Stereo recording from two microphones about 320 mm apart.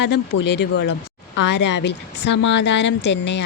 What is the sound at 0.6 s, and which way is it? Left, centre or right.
Speech, left.